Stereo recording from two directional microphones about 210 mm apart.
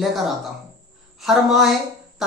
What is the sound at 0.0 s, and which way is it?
A woman's voice, centre (ahead or behind).